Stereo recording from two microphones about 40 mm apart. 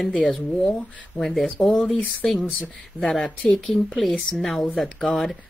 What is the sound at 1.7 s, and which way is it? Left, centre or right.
Speech, left.